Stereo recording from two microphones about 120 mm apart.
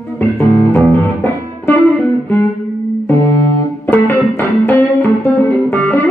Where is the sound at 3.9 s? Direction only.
15° left (ahead or behind).